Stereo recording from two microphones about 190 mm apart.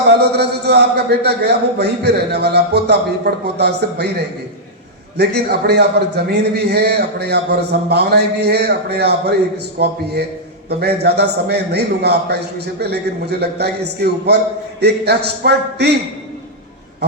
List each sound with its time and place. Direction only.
0.2 s a man's voice: 60° right (ahead or behind)
5.1 s a man's voice: 60° right (ahead or behind)